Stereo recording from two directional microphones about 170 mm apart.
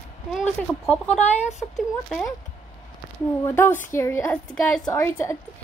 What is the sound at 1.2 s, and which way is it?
Speech, 40° left (ahead or behind).